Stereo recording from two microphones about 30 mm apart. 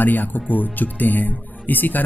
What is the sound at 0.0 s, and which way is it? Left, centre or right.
Speech, left.